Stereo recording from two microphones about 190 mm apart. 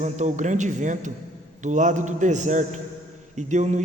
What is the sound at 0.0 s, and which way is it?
A man's voice, 40° right (ahead or behind).